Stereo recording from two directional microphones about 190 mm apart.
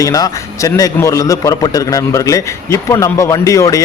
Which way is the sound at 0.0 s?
20° left (ahead or behind).